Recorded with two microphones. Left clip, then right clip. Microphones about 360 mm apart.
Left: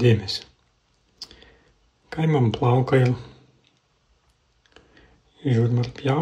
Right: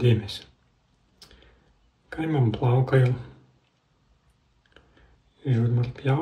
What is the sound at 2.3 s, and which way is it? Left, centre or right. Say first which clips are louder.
Speech: left 5 dB; centre.